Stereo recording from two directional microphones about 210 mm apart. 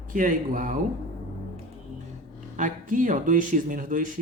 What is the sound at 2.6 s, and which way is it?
Speech, 40° right (ahead or behind).